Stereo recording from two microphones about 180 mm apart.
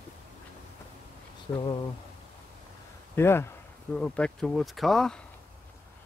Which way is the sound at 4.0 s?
5° left (ahead or behind).